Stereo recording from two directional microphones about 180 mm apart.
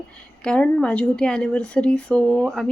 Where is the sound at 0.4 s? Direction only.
5° left (ahead or behind).